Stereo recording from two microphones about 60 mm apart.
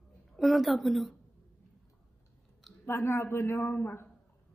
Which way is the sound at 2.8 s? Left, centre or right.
Left.